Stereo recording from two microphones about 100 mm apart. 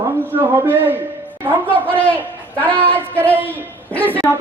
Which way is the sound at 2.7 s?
15° left (ahead or behind).